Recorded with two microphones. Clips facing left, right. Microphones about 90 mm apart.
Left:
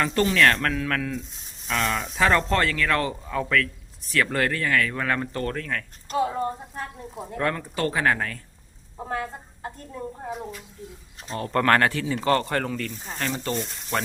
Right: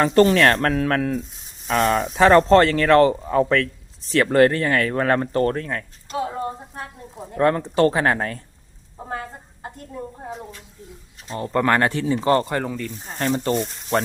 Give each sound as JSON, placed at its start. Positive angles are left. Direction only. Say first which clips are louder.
{"t": 0.0, "sound": "speech", "louder": "right 5 dB", "side_deg": -40}
{"t": 6.1, "sound": "speech", "louder": "left 1 dB", "side_deg": -10}
{"t": 7.3, "sound": "speech", "louder": "right 9 dB", "side_deg": -30}
{"t": 11.3, "sound": "speech", "louder": "right 1 dB", "side_deg": -15}
{"t": 12.5, "sound": "speech", "louder": "right 2 dB", "side_deg": -15}
{"t": 13.1, "sound": "speech", "louder": "right 7 dB", "side_deg": -30}